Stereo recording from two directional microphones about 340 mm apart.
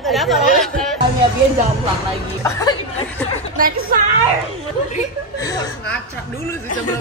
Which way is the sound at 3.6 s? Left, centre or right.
Right.